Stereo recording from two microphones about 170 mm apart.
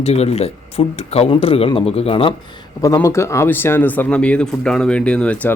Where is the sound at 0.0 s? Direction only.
40° left (ahead or behind).